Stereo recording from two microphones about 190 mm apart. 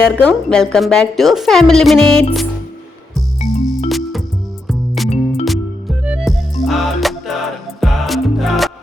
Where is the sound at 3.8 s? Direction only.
Centre (ahead or behind).